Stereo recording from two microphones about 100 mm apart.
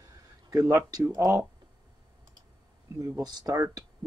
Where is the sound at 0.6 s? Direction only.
30° right (ahead or behind).